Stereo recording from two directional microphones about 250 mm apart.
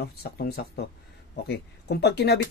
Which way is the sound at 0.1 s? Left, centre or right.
Left.